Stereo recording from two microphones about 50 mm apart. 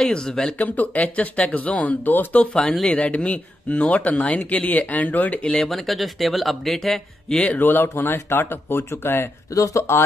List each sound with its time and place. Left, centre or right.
0.1 s speech: centre
0.6 s speech: left
5.7 s speech: centre
7.4 s speech: left
9.5 s speech: left